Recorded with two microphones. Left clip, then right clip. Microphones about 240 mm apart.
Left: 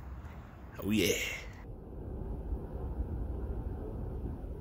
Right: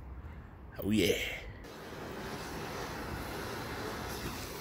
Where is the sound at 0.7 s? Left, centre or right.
Centre.